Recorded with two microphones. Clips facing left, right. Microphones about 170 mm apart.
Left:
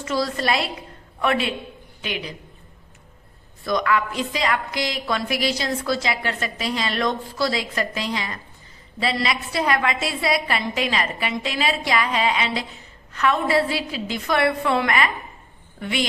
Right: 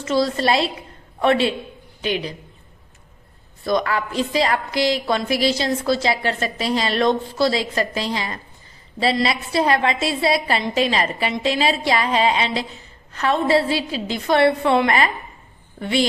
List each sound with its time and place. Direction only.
0.0 s a woman's voice: 25° right (ahead or behind)
3.6 s a woman's voice: 30° right (ahead or behind)